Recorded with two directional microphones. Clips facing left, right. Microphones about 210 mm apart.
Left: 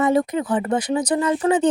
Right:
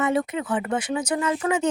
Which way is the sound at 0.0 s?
35° left (ahead or behind).